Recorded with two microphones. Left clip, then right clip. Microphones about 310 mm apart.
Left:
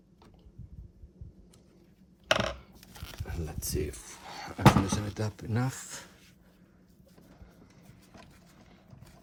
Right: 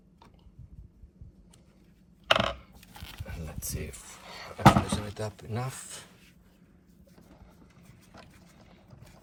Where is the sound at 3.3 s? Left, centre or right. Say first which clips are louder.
Left 4 dB; left.